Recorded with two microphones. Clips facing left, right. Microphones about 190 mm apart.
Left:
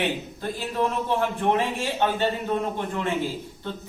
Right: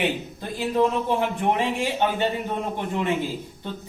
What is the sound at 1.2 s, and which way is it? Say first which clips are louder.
Speech: even; 15° right (ahead or behind).